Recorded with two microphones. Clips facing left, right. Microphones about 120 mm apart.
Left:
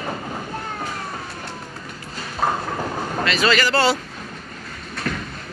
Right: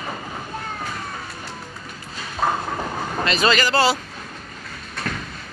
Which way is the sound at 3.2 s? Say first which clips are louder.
Even; 25° right (ahead or behind).